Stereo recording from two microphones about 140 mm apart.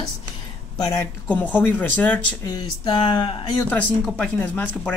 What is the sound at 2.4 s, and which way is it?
Speech, 30° left (ahead or behind).